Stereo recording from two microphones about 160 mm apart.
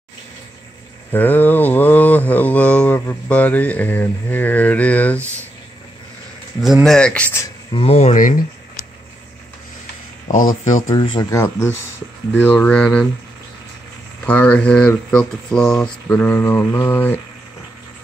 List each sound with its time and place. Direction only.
1.1 s mantra: 10° left (ahead or behind)
6.6 s speech: centre (ahead or behind)
7.7 s speech: 40° left (ahead or behind)
10.2 s speech: 55° left (ahead or behind)
10.9 s speech: 25° left (ahead or behind); by 13.1 s 5° left (ahead or behind)
14.2 s speech: 10° left (ahead or behind)